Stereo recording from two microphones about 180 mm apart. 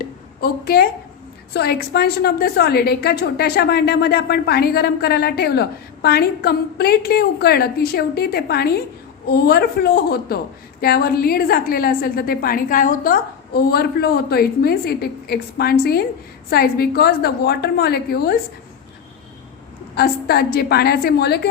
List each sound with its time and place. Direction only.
0.0 s a sound: 55° left (ahead or behind)
1.5 s a woman's voice: 65° left (ahead or behind)
20.0 s a woman's voice: 60° left (ahead or behind)